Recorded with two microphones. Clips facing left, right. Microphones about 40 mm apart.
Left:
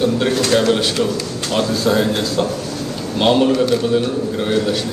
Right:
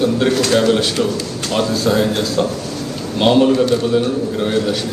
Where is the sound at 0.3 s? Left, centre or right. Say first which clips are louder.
Right 1 dB; left.